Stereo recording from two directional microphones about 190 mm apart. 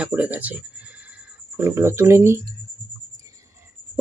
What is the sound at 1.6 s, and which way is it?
Speech, 15° right (ahead or behind).